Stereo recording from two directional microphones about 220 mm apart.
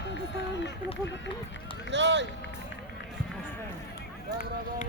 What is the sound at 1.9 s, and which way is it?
Speech, 55° right (ahead or behind).